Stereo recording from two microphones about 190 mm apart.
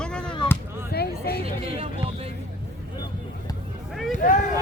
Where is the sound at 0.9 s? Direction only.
55° left (ahead or behind).